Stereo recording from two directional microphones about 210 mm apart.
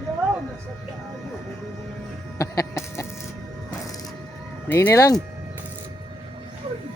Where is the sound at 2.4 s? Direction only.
15° left (ahead or behind).